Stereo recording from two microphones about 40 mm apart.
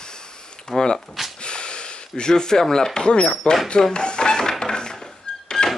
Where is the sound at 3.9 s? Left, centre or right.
Left.